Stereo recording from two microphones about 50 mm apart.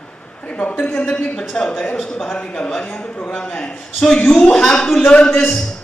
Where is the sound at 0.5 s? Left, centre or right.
Left.